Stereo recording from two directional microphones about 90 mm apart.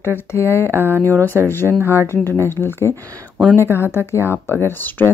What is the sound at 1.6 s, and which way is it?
Speech, 20° right (ahead or behind).